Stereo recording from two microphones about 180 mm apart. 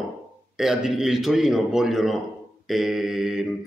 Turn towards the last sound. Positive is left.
turn(degrees=0)  # may be behind; listen again after turning